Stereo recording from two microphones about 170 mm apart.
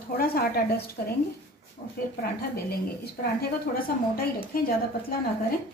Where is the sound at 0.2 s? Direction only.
60° left (ahead or behind).